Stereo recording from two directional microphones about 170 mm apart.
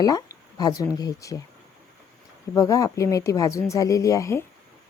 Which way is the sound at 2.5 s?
20° left (ahead or behind).